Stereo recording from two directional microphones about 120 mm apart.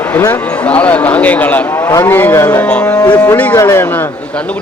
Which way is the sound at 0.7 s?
10° left (ahead or behind).